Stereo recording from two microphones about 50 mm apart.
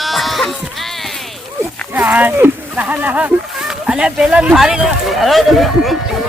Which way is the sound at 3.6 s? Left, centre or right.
Centre.